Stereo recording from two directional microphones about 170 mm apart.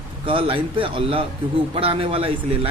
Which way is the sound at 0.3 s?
30° right (ahead or behind).